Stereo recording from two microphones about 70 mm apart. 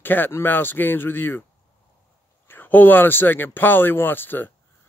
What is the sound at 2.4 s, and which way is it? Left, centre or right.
Speech, left.